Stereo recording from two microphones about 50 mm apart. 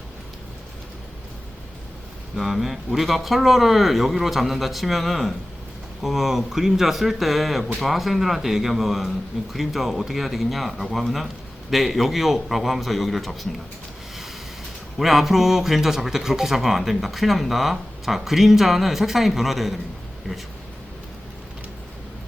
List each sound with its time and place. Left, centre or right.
2.3 s speech: centre
14.9 s speech: centre